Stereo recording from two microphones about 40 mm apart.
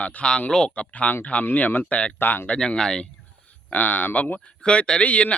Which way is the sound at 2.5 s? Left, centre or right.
Centre.